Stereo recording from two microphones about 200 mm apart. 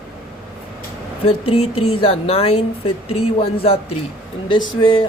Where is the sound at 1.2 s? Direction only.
30° left (ahead or behind).